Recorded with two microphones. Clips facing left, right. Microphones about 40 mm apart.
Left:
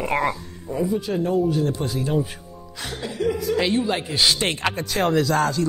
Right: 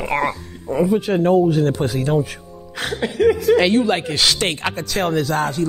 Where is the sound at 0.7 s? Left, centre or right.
Right.